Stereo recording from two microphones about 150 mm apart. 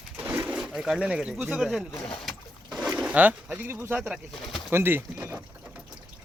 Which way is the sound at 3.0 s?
10° right (ahead or behind).